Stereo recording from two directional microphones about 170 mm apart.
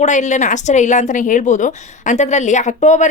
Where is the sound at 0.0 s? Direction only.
45° left (ahead or behind).